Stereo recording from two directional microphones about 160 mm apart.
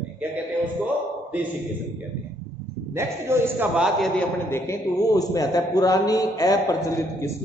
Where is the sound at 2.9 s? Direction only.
15° right (ahead or behind).